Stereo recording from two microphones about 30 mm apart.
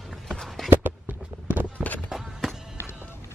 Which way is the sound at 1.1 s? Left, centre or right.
Right.